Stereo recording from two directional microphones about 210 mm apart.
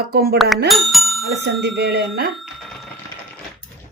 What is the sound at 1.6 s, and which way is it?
Speech, 50° right (ahead or behind).